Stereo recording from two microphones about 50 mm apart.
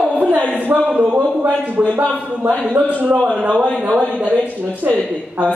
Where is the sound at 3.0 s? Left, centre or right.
Right.